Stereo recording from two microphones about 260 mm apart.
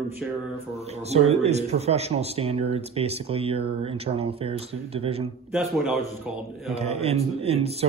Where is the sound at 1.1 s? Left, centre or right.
Right.